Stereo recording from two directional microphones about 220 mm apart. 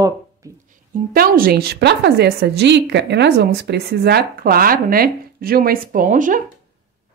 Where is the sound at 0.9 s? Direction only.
40° right (ahead or behind).